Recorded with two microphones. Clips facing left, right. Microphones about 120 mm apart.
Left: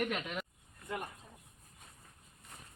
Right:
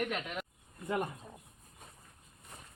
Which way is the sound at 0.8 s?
30° right (ahead or behind).